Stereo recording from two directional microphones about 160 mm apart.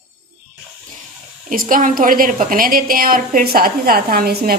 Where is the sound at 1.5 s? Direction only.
60° right (ahead or behind).